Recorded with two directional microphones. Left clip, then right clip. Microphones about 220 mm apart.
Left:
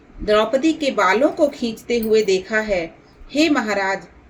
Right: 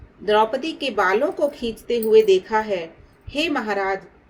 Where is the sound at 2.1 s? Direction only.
30° right (ahead or behind).